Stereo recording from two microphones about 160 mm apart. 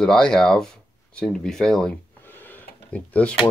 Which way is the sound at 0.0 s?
5° left (ahead or behind).